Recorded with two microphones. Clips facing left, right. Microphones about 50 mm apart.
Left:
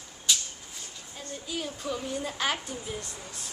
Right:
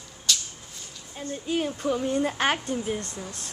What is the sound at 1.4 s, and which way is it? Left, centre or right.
Speech, right.